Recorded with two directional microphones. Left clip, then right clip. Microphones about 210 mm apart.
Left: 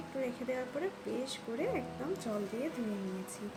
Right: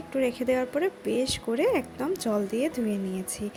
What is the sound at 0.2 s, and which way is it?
A woman's voice, 45° right (ahead or behind).